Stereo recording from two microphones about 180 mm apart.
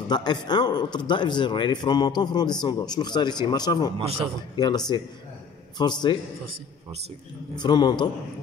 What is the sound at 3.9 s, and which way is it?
Speech, 30° right (ahead or behind).